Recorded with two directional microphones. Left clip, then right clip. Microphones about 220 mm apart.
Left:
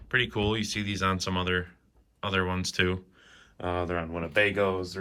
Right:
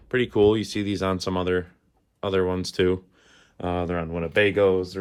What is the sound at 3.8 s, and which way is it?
Speech, 35° right (ahead or behind).